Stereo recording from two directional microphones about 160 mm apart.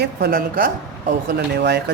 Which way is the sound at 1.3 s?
90° right.